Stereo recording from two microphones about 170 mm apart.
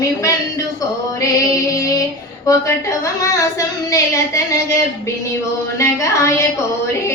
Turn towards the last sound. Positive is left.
turn(degrees=20)  # may be behind; listen again after turning